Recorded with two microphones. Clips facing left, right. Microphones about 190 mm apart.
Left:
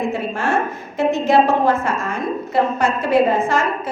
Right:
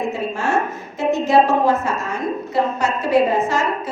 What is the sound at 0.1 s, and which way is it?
A woman's voice, 55° left (ahead or behind).